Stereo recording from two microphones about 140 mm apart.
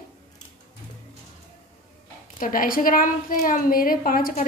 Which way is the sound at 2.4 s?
85° left.